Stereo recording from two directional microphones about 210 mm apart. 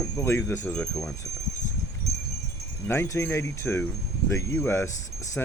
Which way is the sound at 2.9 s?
10° left (ahead or behind).